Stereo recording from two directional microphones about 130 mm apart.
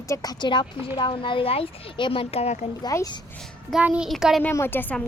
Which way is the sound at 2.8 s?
30° left (ahead or behind).